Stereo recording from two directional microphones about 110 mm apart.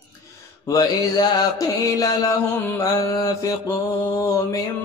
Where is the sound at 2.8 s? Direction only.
35° left (ahead or behind).